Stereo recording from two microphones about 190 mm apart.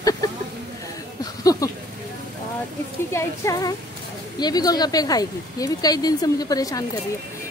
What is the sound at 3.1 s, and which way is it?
Speech, 15° left (ahead or behind).